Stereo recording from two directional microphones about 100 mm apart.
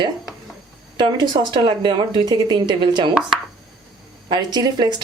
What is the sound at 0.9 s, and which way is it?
Speech, 45° right (ahead or behind).